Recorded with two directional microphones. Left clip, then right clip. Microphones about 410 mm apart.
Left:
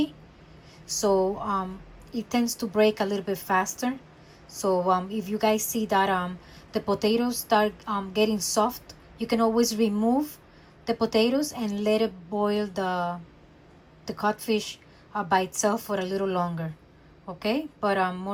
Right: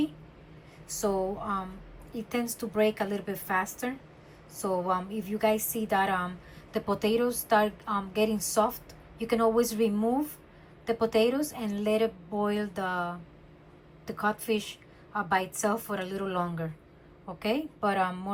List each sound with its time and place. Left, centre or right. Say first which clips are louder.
0.9 s a woman's voice: left 6 dB; centre